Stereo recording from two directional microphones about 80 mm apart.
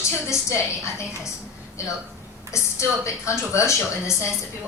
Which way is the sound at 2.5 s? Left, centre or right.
Left.